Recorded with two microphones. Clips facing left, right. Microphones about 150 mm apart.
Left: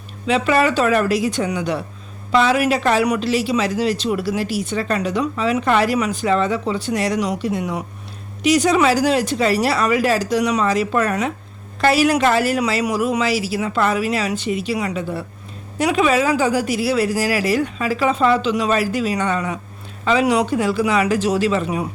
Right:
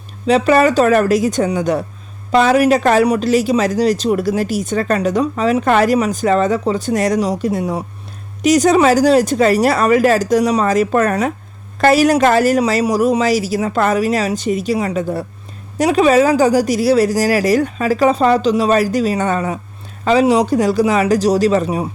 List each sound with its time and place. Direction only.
0.3 s speech: 40° right (ahead or behind)
8.4 s speech: 45° right (ahead or behind)